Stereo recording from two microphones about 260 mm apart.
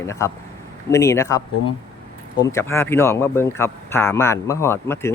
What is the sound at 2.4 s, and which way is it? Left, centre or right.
Speech, centre.